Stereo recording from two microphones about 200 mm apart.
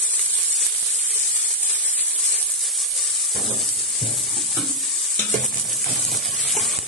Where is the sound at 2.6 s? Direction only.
Centre (ahead or behind).